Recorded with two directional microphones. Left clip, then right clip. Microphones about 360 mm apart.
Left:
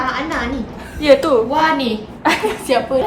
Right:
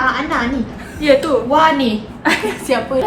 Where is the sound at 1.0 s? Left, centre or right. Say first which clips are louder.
Left 1 dB; centre.